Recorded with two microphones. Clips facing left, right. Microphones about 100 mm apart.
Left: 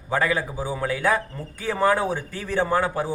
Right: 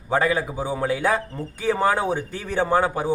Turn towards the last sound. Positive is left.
turn(degrees=-20)  # may be behind; listen again after turning